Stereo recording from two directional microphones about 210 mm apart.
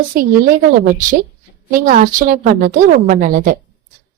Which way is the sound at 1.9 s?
40° right (ahead or behind).